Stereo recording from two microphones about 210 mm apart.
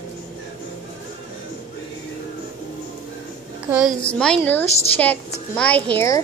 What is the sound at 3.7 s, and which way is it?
Speech, 5° right (ahead or behind).